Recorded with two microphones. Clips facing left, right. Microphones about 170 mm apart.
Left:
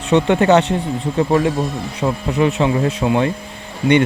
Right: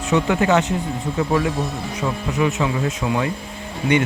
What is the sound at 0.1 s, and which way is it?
Speech, 35° left (ahead or behind).